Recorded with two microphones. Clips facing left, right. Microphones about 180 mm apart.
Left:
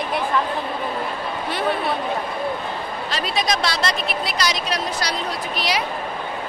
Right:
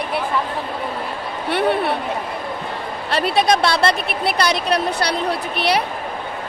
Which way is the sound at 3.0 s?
60° right (ahead or behind).